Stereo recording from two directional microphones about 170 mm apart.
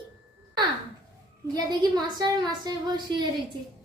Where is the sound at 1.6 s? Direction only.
25° right (ahead or behind).